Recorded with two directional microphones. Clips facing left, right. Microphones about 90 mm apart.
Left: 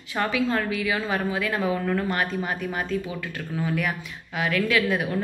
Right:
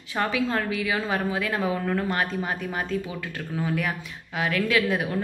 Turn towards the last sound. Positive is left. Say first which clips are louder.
# left 1 dB
turn(degrees=-25)  # may be behind; listen again after turning